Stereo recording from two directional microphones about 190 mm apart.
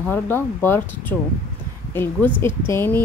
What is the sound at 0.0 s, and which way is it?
A woman's voice, 10° left (ahead or behind).